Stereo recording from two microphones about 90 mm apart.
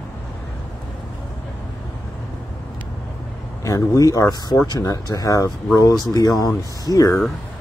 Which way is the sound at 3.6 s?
40° left (ahead or behind).